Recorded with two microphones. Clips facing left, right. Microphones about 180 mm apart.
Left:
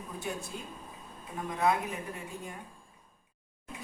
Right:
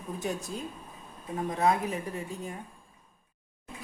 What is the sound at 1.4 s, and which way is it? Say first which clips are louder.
Speech: right 2 dB; 35° right (ahead or behind).